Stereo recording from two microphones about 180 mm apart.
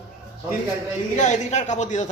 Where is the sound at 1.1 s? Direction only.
40° left (ahead or behind).